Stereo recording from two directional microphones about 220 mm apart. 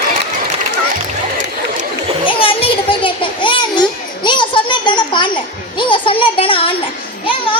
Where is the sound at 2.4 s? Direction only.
25° left (ahead or behind).